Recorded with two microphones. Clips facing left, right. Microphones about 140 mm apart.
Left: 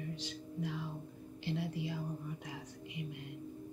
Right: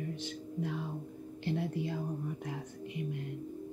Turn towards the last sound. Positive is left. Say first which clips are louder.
# right 6 dB
turn(degrees=-50)  # may be behind; listen again after turning